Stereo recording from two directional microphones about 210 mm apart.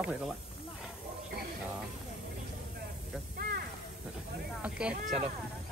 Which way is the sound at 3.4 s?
45° right (ahead or behind).